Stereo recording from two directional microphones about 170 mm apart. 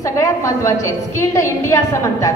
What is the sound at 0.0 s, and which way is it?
A woman's voice, 20° left (ahead or behind).